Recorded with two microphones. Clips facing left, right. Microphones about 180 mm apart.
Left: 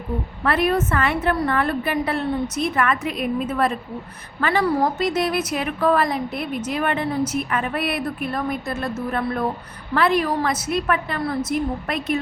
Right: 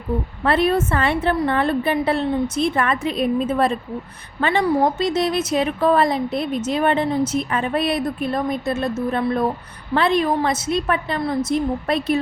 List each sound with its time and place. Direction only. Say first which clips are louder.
0.4 s a woman's voice: right 2 dB; 25° right (ahead or behind)